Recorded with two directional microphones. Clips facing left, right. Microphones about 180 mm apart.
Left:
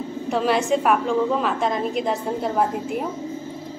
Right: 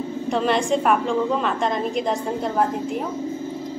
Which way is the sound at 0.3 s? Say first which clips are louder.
Even; 5° left (ahead or behind).